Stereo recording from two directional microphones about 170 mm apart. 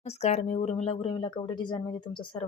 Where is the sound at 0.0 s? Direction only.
40° left (ahead or behind).